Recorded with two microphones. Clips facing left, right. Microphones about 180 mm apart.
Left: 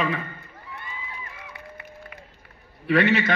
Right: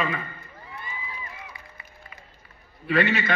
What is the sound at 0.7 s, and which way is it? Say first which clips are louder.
Crowd: even; 65° left (ahead or behind).